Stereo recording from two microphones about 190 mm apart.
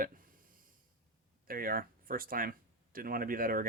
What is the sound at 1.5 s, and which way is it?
Speech, 50° right (ahead or behind).